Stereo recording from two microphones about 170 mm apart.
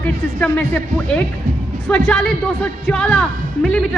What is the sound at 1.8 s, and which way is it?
A man's voice, 5° left (ahead or behind).